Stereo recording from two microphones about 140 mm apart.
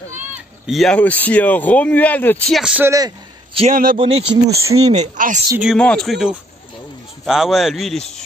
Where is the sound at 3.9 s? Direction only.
45° right (ahead or behind); by 5.3 s 60° right (ahead or behind).